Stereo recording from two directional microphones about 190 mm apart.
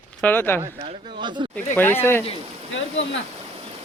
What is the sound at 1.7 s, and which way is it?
Speech, 10° left (ahead or behind).